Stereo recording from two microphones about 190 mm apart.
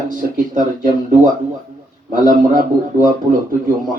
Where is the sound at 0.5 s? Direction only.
45° right (ahead or behind).